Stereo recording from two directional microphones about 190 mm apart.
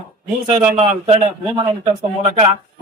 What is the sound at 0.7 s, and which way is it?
Speech, 35° right (ahead or behind).